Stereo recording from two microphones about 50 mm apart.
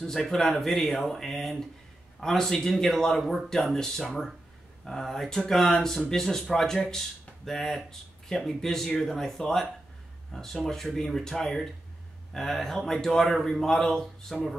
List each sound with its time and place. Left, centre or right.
0.0 s a man's voice: centre
4.0 s a man's voice: centre